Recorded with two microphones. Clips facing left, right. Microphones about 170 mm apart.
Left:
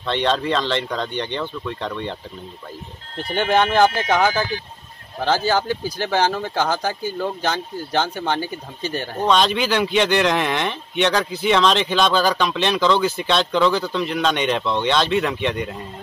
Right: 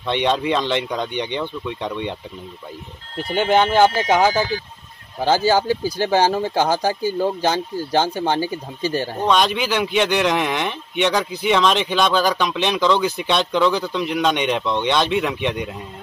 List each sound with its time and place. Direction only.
0.0 s speech: 15° right (ahead or behind)
3.3 s speech: 10° right (ahead or behind)
4.0 s speech: 30° right (ahead or behind)
5.2 s speech: 10° right (ahead or behind)